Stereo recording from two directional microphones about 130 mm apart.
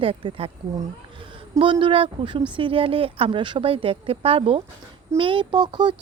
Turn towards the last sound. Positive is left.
turn(degrees=-35)  # may be behind; listen again after turning